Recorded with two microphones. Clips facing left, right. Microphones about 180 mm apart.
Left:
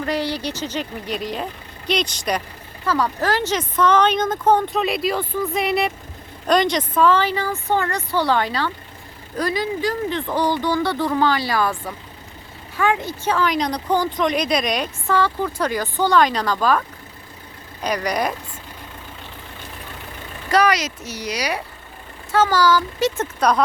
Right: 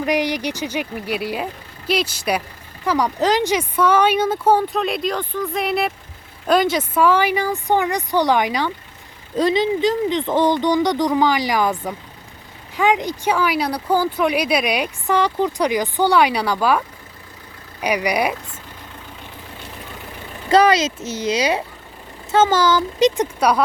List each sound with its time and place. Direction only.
0.0 s speech: 15° right (ahead or behind)
20.5 s speech: 25° right (ahead or behind); by 23.6 s 10° right (ahead or behind)